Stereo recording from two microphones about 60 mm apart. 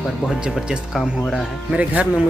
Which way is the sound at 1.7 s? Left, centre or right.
Right.